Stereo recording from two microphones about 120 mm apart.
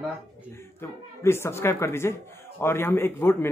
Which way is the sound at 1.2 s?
20° left (ahead or behind).